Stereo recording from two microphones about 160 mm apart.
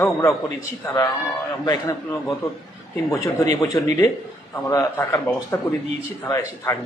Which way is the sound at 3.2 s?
20° left (ahead or behind).